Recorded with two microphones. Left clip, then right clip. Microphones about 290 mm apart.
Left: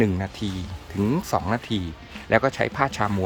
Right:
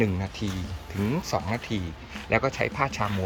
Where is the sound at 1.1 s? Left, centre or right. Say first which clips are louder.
Left 4 dB; left.